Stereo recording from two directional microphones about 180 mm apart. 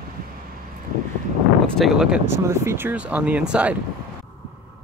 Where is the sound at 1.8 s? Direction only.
Centre (ahead or behind).